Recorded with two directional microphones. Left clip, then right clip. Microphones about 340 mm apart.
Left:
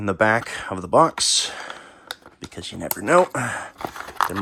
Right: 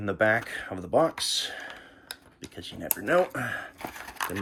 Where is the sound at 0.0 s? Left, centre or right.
Centre.